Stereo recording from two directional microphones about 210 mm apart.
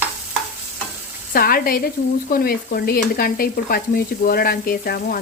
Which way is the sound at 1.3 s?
45° left (ahead or behind).